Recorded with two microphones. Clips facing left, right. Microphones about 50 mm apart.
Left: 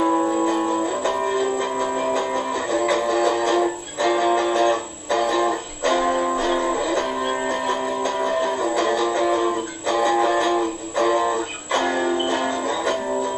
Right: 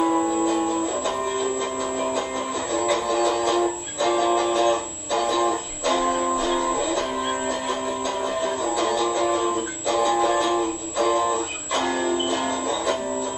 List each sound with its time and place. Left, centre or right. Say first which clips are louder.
0.0 s music: left 2 dB; centre
2.1 s music: left 3 dB; left
8.7 s music: left 2 dB; left